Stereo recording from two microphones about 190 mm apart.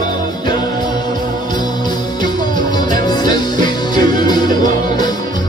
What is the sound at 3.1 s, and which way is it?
Music, 20° left (ahead or behind).